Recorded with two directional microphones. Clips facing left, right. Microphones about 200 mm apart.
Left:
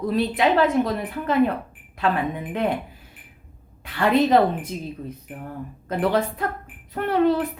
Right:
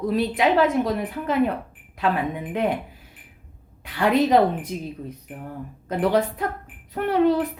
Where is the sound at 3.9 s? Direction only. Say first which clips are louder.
Even; 10° right (ahead or behind).